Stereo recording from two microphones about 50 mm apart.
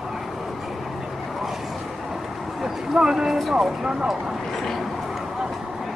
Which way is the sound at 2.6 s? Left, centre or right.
Centre.